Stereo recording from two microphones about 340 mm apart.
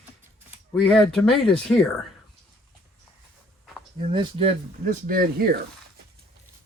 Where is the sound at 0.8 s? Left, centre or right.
Centre.